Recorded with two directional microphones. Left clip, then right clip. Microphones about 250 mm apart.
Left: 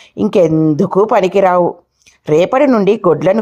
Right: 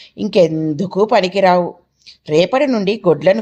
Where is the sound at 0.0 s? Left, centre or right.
Left.